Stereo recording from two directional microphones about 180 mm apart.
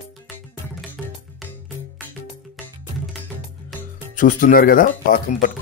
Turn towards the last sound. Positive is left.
turn(degrees=50)  # may be behind; listen again after turning